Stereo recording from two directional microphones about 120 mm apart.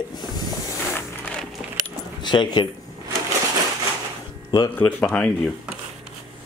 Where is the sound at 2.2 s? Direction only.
40° left (ahead or behind).